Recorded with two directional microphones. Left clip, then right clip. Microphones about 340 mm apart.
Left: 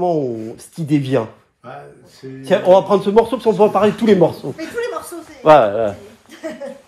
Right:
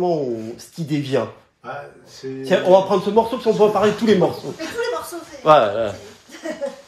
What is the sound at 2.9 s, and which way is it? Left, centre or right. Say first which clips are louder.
Speech: left 4 dB; centre.